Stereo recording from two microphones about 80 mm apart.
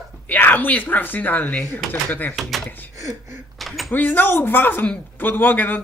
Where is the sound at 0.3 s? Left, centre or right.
Left.